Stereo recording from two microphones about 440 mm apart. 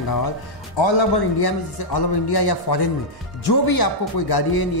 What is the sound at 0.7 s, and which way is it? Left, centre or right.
A man's voice, left.